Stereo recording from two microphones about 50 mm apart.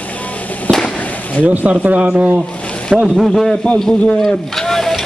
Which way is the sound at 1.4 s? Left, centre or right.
Right.